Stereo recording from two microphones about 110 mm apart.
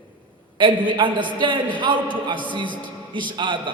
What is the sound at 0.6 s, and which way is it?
A man's voice, 45° right (ahead or behind).